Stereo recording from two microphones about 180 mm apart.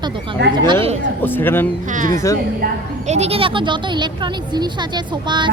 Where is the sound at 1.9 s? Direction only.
45° right (ahead or behind).